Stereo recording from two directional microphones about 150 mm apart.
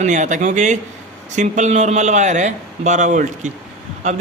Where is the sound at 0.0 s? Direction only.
55° right (ahead or behind).